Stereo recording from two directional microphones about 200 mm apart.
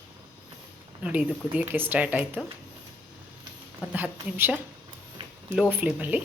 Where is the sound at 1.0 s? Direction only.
10° right (ahead or behind).